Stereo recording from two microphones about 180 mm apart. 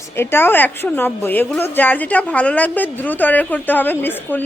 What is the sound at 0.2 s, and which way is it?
A woman's voice, 15° left (ahead or behind).